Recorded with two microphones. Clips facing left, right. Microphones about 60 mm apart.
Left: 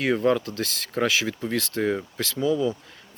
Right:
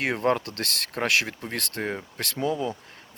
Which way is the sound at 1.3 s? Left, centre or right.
Right.